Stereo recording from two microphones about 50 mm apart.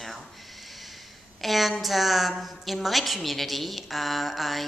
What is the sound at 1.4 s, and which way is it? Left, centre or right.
A woman's voice, centre.